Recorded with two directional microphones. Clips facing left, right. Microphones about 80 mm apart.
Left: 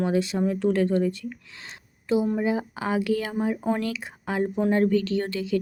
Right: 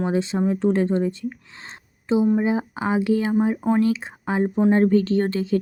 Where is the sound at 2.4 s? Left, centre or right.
Right.